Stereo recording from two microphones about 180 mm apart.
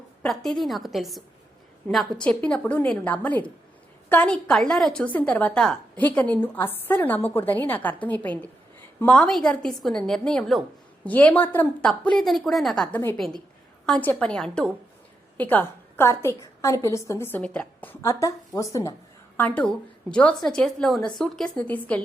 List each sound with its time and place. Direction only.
0.2 s a woman's voice: centre (ahead or behind); by 18.9 s 15° left (ahead or behind)
19.5 s a woman's voice: 5° left (ahead or behind)